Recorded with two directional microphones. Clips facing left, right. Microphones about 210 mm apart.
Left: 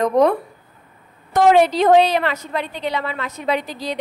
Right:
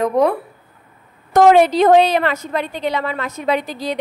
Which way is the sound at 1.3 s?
50° right (ahead or behind).